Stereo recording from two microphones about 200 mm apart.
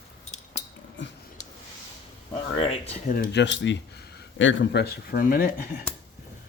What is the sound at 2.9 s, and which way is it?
Speech, 40° left (ahead or behind).